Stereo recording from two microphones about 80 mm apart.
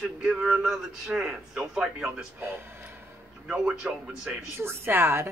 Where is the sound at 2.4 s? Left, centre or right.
Right.